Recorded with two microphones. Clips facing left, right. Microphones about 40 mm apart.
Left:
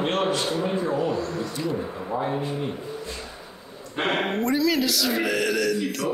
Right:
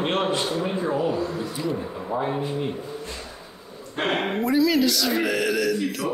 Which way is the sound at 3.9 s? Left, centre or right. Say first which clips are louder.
Even; centre.